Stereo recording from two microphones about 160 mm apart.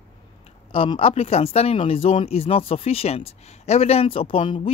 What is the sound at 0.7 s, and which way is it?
Speech, 35° left (ahead or behind).